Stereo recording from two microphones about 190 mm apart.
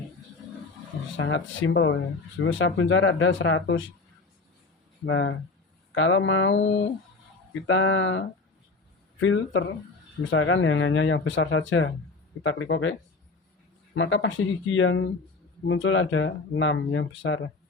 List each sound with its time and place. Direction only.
1.1 s speech: 90° left
5.0 s speech: 90° left
7.5 s speech: 90° left
9.2 s speech: 85° left